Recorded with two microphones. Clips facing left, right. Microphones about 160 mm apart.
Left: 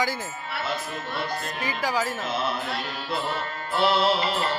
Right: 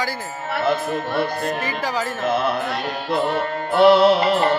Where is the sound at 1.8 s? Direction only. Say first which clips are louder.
Even; 10° left (ahead or behind).